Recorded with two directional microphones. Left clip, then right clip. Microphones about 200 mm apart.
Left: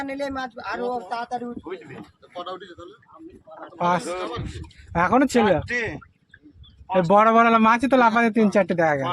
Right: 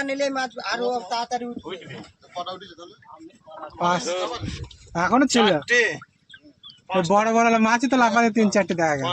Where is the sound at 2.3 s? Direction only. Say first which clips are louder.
Right 1 dB; 40° right (ahead or behind).